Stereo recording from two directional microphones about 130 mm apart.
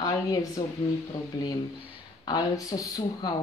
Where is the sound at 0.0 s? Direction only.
30° left (ahead or behind).